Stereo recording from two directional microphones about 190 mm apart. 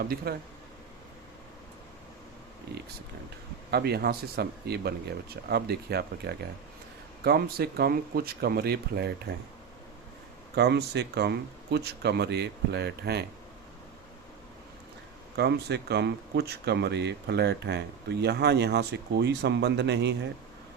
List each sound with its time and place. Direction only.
0.3 s speech: 55° right (ahead or behind)
3.7 s speech: 60° right (ahead or behind)
10.5 s speech: 60° right (ahead or behind)
15.4 s speech: 60° right (ahead or behind)